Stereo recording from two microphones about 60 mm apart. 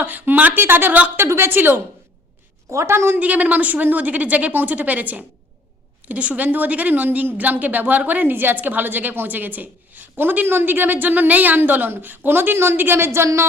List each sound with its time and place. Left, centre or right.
0.0 s a woman's voice: right
1.2 s a woman's voice: right
2.6 s a woman's voice: right
3.2 s a woman's voice: right